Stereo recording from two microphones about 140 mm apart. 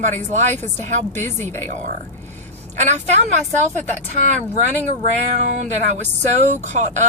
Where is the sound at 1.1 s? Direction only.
15° left (ahead or behind).